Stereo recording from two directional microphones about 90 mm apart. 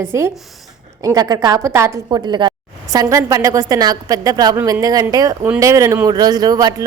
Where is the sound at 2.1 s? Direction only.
55° right (ahead or behind).